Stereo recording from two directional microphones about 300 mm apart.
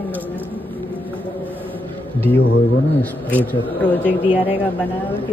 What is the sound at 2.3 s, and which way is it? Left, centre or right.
Speech, left.